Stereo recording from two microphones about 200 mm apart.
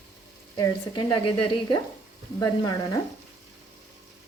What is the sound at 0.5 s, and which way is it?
Speech, 20° left (ahead or behind).